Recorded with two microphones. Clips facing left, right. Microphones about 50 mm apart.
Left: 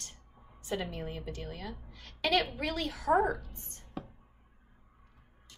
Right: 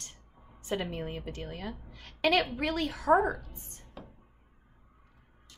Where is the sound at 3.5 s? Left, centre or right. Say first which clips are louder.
Right 1 dB; right.